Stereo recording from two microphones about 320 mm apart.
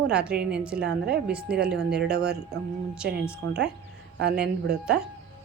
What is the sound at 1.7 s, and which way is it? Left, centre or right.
Speech, right.